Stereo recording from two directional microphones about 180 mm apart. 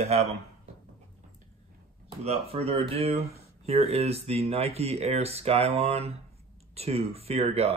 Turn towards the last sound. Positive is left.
turn(degrees=-35)  # may be behind; listen again after turning